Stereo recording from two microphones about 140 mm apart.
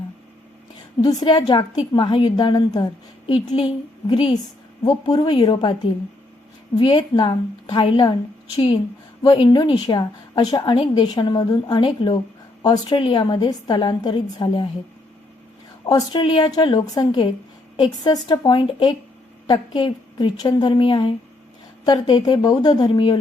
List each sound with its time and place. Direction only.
1.0 s a woman's voice: 30° left (ahead or behind)
9.2 s a woman's voice: 30° left (ahead or behind)
15.9 s a woman's voice: 25° left (ahead or behind)